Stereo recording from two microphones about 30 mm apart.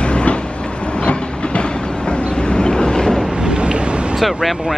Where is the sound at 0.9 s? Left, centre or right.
Left.